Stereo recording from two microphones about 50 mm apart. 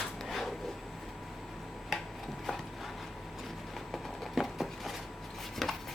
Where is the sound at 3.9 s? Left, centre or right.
Centre.